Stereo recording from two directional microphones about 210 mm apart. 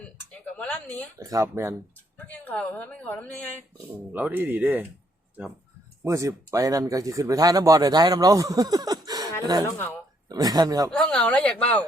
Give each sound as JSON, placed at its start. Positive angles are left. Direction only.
{"t": 0.0, "sound": "a sound", "side_deg": 5}
{"t": 1.2, "sound": "speech", "side_deg": -15}
{"t": 2.1, "sound": "a woman's voice", "side_deg": 5}
{"t": 4.1, "sound": "speech", "side_deg": -10}
{"t": 6.1, "sound": "speech", "side_deg": -15}
{"t": 9.6, "sound": "a woman's voice", "side_deg": 10}
{"t": 10.2, "sound": "speech", "side_deg": -20}
{"t": 10.9, "sound": "a woman's voice", "side_deg": 5}